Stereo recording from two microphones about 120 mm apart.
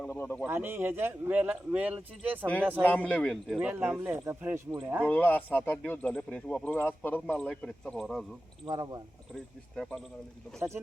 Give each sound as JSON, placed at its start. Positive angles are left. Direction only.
{"t": 0.0, "sound": "speech", "side_deg": 15}
{"t": 0.4, "sound": "speech", "side_deg": -20}
{"t": 3.1, "sound": "speech", "side_deg": 5}
{"t": 3.6, "sound": "speech", "side_deg": -10}
{"t": 5.0, "sound": "speech", "side_deg": 15}
{"t": 8.6, "sound": "speech", "side_deg": -35}
{"t": 9.3, "sound": "speech", "side_deg": 5}